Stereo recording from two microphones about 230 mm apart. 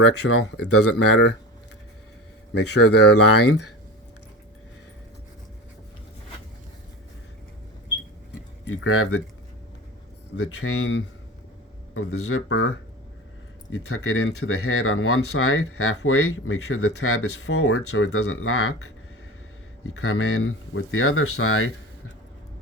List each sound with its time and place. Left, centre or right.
0.2 s speech: left
2.8 s speech: left
3.3 s speech: left
8.6 s speech: left
10.3 s speech: left
12.1 s speech: left
13.7 s speech: left